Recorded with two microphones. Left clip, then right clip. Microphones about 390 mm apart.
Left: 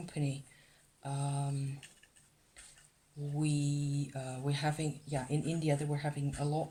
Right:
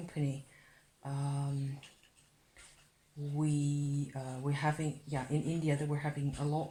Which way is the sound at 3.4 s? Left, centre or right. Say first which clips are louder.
Even; left.